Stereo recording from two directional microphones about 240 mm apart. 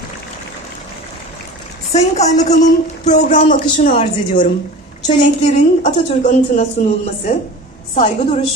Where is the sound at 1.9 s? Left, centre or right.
Left.